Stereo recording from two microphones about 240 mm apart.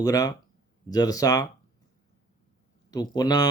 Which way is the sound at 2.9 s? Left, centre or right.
Centre.